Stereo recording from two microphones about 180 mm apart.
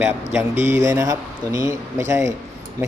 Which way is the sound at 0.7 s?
15° right (ahead or behind).